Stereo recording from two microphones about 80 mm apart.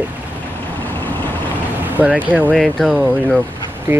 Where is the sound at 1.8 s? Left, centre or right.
Right.